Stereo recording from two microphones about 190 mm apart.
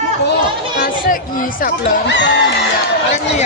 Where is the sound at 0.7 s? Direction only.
45° left (ahead or behind).